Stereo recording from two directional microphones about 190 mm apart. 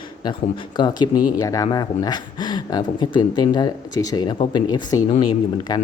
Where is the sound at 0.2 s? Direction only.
25° left (ahead or behind).